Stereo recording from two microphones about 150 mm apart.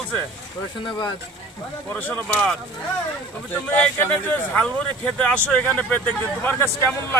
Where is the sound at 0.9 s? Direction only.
30° left (ahead or behind).